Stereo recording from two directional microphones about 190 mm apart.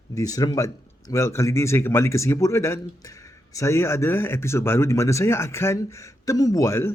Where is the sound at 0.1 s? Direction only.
20° left (ahead or behind).